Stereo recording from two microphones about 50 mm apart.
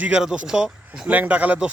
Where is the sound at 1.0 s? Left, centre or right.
Right.